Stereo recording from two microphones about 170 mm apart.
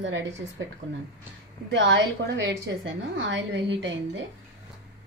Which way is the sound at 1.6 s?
90° right.